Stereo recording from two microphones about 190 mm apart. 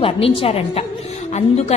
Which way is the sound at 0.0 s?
30° left (ahead or behind).